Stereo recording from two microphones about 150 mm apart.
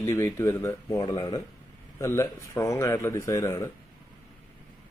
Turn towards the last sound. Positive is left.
turn(degrees=20)  # may be behind; listen again after turning